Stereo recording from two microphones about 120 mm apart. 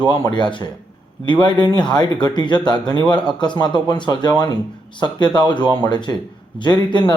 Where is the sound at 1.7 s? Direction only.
40° left (ahead or behind).